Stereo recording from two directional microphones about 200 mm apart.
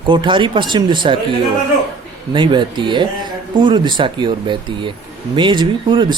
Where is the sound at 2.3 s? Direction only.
25° right (ahead or behind).